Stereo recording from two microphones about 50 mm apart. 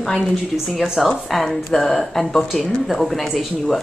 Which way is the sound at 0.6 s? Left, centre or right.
Centre.